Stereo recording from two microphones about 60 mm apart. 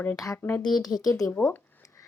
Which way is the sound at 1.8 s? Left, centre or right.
Left.